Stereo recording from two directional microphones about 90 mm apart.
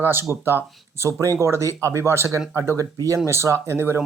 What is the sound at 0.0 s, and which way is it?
A man's voice, 25° right (ahead or behind).